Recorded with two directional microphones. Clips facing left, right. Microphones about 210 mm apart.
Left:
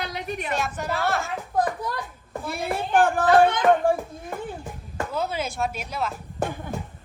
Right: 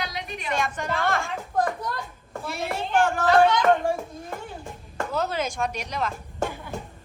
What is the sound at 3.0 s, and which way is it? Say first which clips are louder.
Speech: left 1 dB; 55° left (ahead or behind).